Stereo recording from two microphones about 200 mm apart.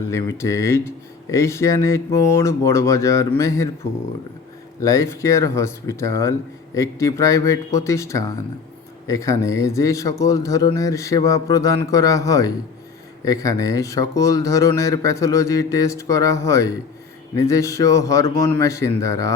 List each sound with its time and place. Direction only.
0.1 s speech: 15° left (ahead or behind)
4.8 s speech: 15° left (ahead or behind)